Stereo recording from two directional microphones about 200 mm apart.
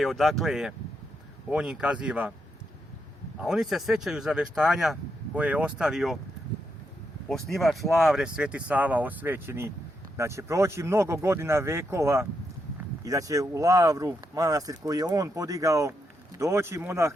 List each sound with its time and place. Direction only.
0.0 s speech: centre (ahead or behind)
3.4 s speech: centre (ahead or behind)
7.3 s speech: centre (ahead or behind); by 17.1 s 15° right (ahead or behind)